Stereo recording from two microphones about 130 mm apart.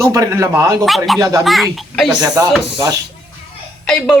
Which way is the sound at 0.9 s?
Centre (ahead or behind).